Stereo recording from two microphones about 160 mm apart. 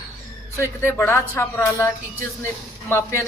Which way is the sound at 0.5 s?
15° left (ahead or behind).